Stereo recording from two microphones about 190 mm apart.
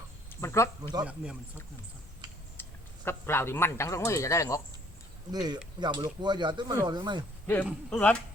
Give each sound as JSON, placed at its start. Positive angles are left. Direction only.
{"t": 0.4, "sound": "a man's voice", "side_deg": 15}
{"t": 1.0, "sound": "speech", "side_deg": -5}
{"t": 2.6, "sound": "speech", "side_deg": 10}
{"t": 5.3, "sound": "speech", "side_deg": -20}
{"t": 7.4, "sound": "speech", "side_deg": 10}